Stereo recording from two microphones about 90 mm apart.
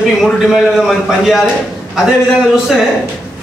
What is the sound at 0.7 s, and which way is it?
Speech, centre (ahead or behind).